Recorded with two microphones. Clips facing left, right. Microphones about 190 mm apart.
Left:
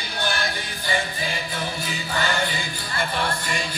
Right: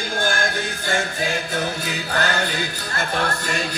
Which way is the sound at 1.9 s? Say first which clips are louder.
Right 1 dB; 70° right (ahead or behind).